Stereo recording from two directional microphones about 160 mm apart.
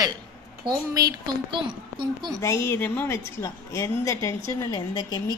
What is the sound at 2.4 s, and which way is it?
A woman's voice, 15° left (ahead or behind).